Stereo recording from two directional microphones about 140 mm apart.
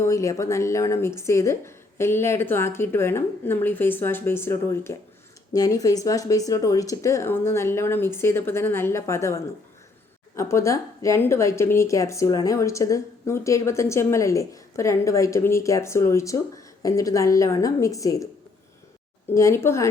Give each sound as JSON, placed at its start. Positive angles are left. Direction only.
{"t": 0.0, "sound": "a woman's voice", "side_deg": 20}
{"t": 19.3, "sound": "a woman's voice", "side_deg": 20}